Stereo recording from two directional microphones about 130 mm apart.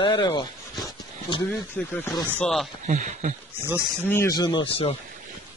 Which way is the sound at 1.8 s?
10° left (ahead or behind).